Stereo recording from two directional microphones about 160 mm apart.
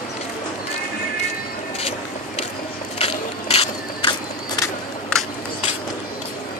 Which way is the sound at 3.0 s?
40° left (ahead or behind).